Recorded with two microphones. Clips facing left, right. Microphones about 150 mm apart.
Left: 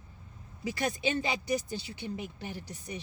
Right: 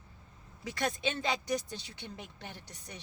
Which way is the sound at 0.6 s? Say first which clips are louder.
Left 2 dB; 10° left (ahead or behind).